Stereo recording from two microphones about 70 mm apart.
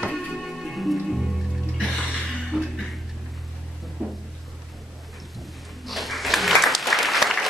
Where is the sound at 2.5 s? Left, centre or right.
Centre.